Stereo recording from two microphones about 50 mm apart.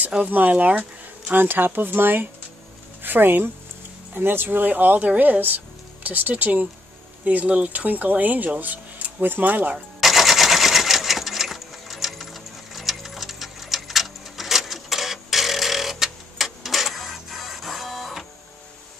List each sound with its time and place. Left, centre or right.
0.1 s speech: right
1.4 s speech: right
9.9 s sewing machine: centre